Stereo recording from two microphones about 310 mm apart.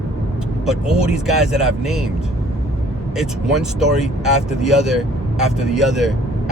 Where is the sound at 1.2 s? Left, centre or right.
Centre.